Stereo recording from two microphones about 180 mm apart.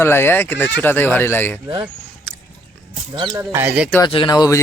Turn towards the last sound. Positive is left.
turn(degrees=20)  # may be behind; listen again after turning